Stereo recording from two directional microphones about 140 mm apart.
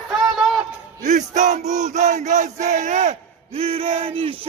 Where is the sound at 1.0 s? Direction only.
60° right (ahead or behind).